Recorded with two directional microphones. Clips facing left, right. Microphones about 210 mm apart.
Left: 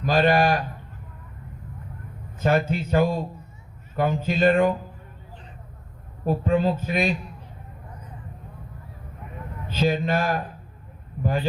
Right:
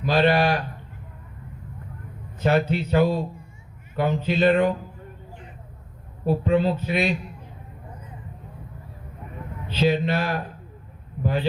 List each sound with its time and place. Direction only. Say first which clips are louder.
0.0 s speech: even; 45° left (ahead or behind)
2.4 s speech: right 1 dB; 45° left (ahead or behind)
6.2 s speech: right 1 dB; 45° left (ahead or behind)
9.6 s speech: right 1 dB; 45° left (ahead or behind)